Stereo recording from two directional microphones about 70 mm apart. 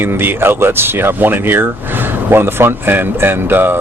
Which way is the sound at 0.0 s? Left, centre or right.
Right.